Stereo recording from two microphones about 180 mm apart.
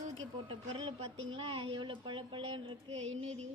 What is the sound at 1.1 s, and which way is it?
Speech, 90° right.